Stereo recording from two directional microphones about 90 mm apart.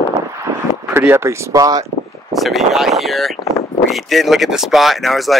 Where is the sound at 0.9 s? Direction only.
25° right (ahead or behind); by 1.8 s 45° right (ahead or behind).